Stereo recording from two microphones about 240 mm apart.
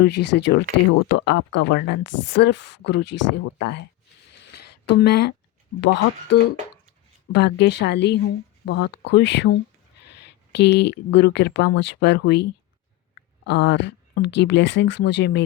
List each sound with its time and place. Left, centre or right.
0.0 s speech: left
2.0 s a woman's voice: left
2.4 s speech: left
4.4 s a sound: left
4.9 s speech: left